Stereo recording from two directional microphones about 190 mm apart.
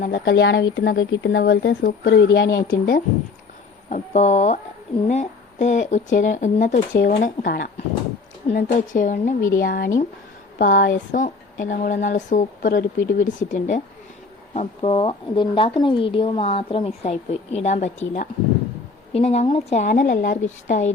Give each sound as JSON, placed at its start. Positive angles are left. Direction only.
{"t": 0.0, "sound": "speech", "side_deg": 55}